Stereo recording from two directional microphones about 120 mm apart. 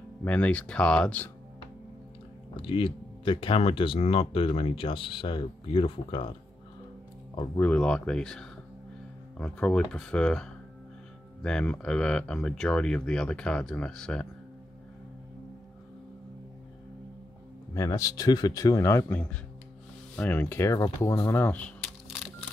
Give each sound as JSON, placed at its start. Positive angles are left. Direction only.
{"t": 0.2, "sound": "speech", "side_deg": 10}
{"t": 2.5, "sound": "speech", "side_deg": 45}
{"t": 7.5, "sound": "speech", "side_deg": 10}
{"t": 17.7, "sound": "speech", "side_deg": 25}